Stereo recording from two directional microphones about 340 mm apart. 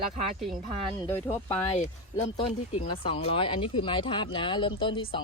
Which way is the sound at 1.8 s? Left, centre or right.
Centre.